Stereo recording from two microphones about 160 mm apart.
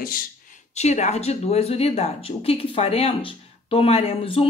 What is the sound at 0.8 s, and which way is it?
A woman's voice, 45° left (ahead or behind).